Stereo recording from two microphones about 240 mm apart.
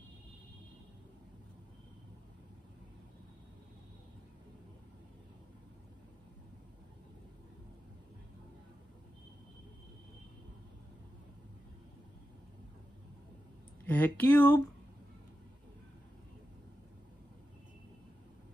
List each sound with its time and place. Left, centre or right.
13.8 s speech: centre